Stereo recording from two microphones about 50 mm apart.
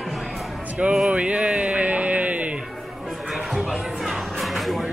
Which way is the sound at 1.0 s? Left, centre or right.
Right.